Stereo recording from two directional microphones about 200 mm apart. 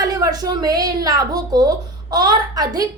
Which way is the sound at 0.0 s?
20° right (ahead or behind).